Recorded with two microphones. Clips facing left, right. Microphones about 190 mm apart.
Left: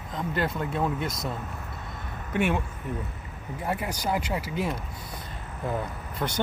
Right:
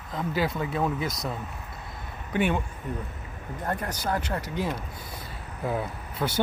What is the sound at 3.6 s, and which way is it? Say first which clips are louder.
Speech: left 1 dB; 10° left (ahead or behind).